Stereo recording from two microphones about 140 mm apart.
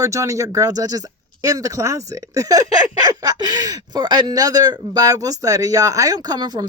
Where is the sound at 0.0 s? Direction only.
25° right (ahead or behind).